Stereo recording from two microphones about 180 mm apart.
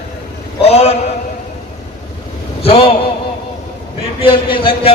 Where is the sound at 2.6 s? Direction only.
35° left (ahead or behind).